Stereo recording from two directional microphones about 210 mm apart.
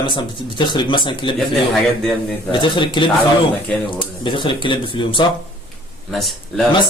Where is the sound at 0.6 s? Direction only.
20° left (ahead or behind).